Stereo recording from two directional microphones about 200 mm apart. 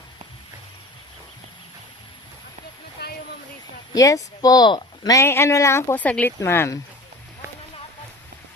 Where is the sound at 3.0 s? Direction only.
50° left (ahead or behind).